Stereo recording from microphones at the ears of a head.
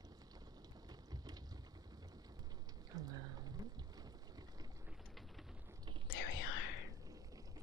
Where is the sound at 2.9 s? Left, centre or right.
Right.